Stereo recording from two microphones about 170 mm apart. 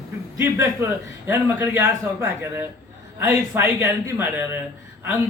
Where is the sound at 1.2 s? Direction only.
15° right (ahead or behind).